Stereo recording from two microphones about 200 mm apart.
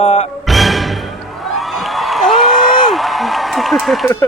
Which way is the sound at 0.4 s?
Centre (ahead or behind).